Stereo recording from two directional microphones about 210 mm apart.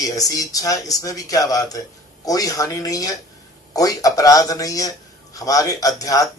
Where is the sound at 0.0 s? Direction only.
15° left (ahead or behind).